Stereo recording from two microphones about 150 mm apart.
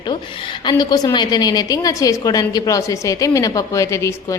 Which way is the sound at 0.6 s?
30° left (ahead or behind).